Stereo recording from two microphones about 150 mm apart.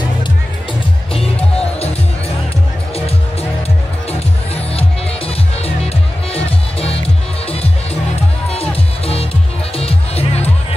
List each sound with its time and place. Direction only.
1.1 s music: 40° left (ahead or behind)
4.7 s music: 40° left (ahead or behind)